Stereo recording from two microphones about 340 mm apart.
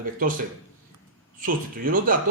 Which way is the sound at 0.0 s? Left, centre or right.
Right.